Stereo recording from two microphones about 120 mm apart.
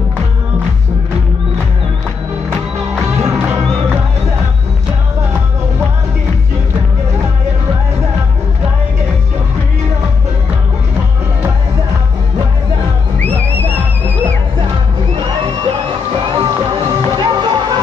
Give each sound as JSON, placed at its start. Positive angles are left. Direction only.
{"t": 3.2, "sound": "music", "side_deg": -20}
{"t": 13.6, "sound": "music", "side_deg": -15}
{"t": 16.3, "sound": "music", "side_deg": -40}